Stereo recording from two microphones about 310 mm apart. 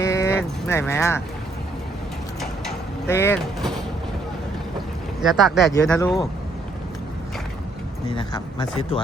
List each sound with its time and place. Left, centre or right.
0.0 s a sound: centre
2.4 s vehicle: centre
5.2 s speech: centre
8.1 s speech: centre